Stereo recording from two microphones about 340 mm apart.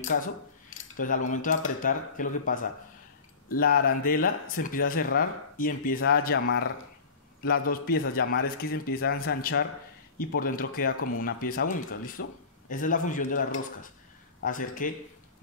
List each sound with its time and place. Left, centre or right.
0.9 s speech: left
7.7 s speech: left